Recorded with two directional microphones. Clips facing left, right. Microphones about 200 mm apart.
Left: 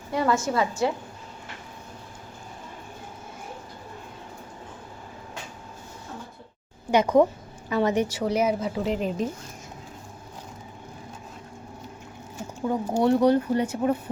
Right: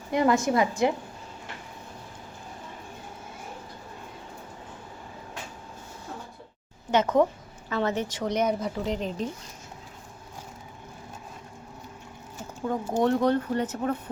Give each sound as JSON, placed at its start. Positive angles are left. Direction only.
{"t": 0.1, "sound": "a woman's voice", "side_deg": -20}
{"t": 6.9, "sound": "speech", "side_deg": 15}
{"t": 12.6, "sound": "speech", "side_deg": 10}